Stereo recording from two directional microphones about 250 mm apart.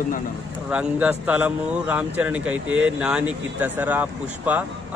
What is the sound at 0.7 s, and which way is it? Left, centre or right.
A man's voice, centre.